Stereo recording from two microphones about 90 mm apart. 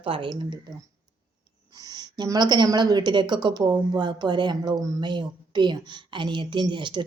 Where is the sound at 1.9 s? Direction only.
50° right (ahead or behind).